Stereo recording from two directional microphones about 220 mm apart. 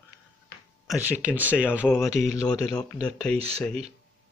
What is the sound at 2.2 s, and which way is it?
Speech, 30° right (ahead or behind).